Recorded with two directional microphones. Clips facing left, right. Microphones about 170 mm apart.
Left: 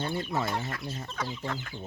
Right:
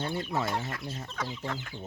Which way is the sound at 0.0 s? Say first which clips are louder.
Left 1 dB; centre (ahead or behind).